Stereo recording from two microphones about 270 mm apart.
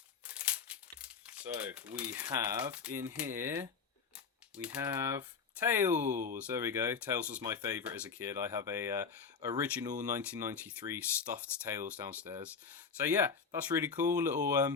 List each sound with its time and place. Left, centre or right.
0.3 s crumpling: centre
2.2 s speech: centre
6.1 s speech: right
6.3 s speech: centre